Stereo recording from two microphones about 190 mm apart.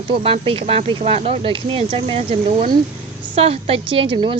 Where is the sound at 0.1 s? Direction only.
30° right (ahead or behind).